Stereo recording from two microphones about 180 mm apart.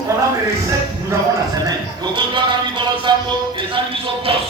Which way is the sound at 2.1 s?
25° right (ahead or behind).